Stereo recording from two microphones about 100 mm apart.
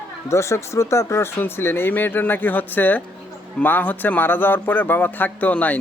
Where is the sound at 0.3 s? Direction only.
30° left (ahead or behind).